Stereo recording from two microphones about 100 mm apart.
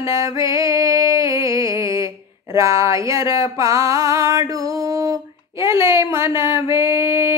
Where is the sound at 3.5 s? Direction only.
30° right (ahead or behind).